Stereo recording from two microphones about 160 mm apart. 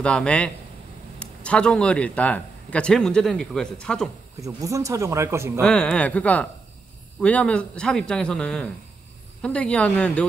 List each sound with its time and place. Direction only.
0.0 s a man's voice: 5° left (ahead or behind)
4.5 s speech: 20° right (ahead or behind)
5.6 s a man's voice: 5° left (ahead or behind)